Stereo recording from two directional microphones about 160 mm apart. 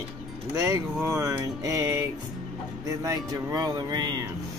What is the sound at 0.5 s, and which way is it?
Speech, 20° right (ahead or behind).